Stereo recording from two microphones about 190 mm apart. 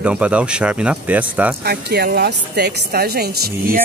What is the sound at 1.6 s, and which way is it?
A woman's voice, 55° right (ahead or behind).